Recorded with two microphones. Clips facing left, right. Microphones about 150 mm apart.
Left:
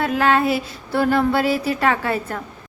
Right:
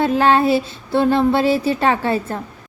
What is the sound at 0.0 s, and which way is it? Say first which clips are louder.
Speech: right 3 dB; 30° right (ahead or behind).